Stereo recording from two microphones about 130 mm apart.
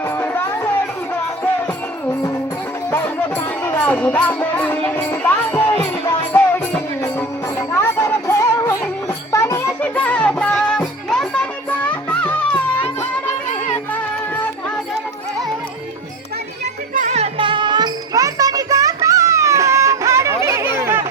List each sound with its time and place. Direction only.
0.2 s music: 20° left (ahead or behind)
16.9 s music: 70° right (ahead or behind)
17.3 s music: 40° right (ahead or behind); by 20.3 s 25° right (ahead or behind)
20.4 s chatter: 20° right (ahead or behind)